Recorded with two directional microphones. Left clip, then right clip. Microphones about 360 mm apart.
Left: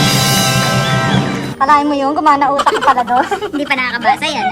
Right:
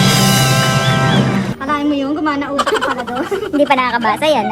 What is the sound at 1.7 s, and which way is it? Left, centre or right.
Speech, centre.